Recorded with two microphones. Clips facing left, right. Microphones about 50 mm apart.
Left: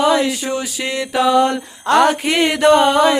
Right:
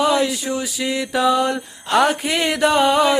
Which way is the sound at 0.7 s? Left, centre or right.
Left.